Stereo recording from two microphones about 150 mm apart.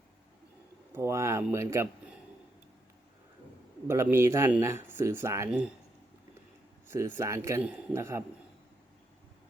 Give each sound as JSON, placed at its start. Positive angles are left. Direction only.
{"t": 0.9, "sound": "a sound", "side_deg": -20}
{"t": 1.5, "sound": "speech", "side_deg": -20}
{"t": 3.8, "sound": "speech", "side_deg": -15}
{"t": 5.5, "sound": "speech", "side_deg": -5}
{"t": 6.8, "sound": "speech", "side_deg": -15}